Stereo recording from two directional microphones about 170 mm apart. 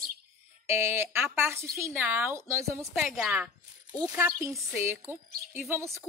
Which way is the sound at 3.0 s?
Centre (ahead or behind).